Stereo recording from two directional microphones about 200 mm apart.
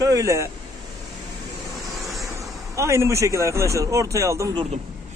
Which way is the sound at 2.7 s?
15° right (ahead or behind).